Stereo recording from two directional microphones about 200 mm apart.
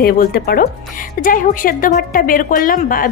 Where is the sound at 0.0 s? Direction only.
50° left (ahead or behind).